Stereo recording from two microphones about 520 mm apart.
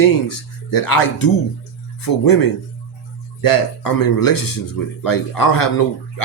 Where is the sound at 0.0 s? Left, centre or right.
Left.